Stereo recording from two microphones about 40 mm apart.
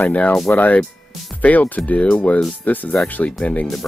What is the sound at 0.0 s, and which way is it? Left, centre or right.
Speech, left.